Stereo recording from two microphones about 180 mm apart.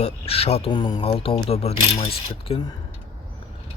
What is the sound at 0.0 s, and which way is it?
Speech, 35° left (ahead or behind).